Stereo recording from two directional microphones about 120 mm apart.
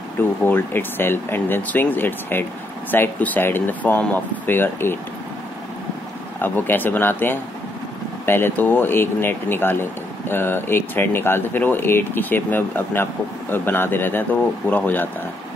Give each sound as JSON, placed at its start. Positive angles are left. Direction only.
{"t": 0.4, "sound": "speech", "side_deg": 15}
{"t": 6.4, "sound": "speech", "side_deg": 15}